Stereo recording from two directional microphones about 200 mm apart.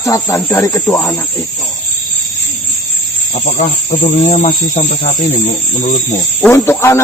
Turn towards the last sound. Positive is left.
turn(degrees=15)  # may be behind; listen again after turning